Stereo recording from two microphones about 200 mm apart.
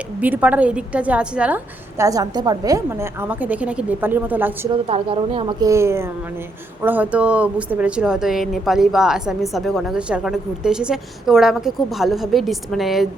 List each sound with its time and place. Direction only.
0.2 s a woman's voice: 10° right (ahead or behind)
4.9 s speech: 30° right (ahead or behind); by 13.1 s centre (ahead or behind)